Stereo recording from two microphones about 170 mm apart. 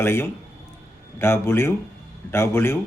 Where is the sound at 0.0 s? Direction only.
15° left (ahead or behind).